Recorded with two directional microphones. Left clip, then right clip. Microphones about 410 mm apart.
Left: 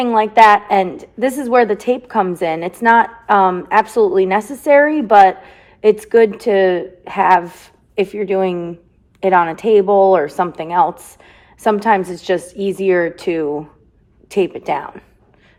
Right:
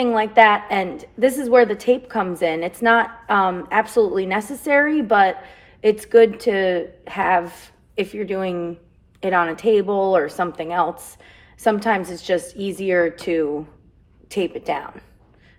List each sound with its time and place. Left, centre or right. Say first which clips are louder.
0.0 s a woman's voice: left 4 dB; centre